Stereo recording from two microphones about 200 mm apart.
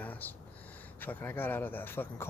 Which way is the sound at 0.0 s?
10° left (ahead or behind).